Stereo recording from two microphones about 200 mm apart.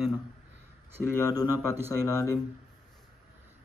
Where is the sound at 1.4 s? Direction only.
10° right (ahead or behind).